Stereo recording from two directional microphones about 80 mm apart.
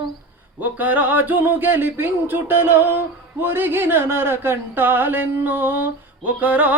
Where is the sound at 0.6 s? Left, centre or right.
Right.